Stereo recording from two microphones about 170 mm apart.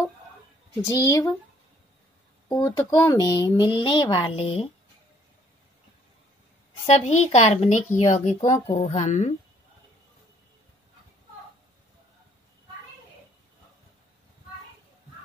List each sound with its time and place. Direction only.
0.8 s speech: 20° left (ahead or behind)
2.5 s speech: 15° left (ahead or behind); by 4.6 s 35° left (ahead or behind)
6.9 s a woman's voice: 40° left (ahead or behind)